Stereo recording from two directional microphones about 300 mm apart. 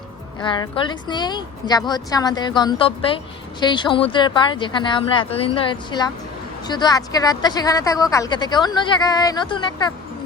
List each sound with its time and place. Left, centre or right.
0.3 s speech: centre